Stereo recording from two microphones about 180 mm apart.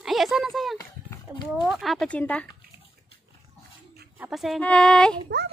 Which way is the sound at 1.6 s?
Centre (ahead or behind).